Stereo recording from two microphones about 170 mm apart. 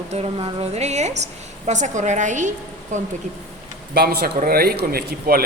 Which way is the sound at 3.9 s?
65° right (ahead or behind).